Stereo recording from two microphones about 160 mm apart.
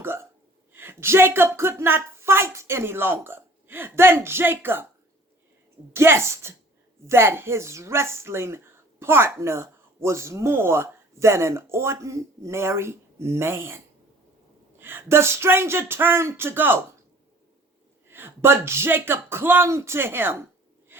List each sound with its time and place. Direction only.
0.0 s hiccup: 15° right (ahead or behind)
0.7 s speech: 15° right (ahead or behind)
5.9 s speech: 15° right (ahead or behind)
18.1 s speech: 15° right (ahead or behind)